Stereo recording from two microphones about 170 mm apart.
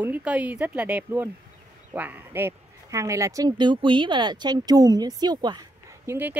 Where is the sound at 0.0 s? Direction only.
10° right (ahead or behind).